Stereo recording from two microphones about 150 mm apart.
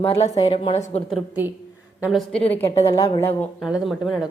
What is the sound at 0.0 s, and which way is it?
Speech, 40° left (ahead or behind).